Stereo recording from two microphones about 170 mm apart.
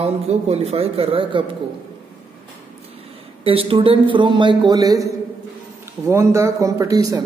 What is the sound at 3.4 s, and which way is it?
A man's voice, 30° right (ahead or behind).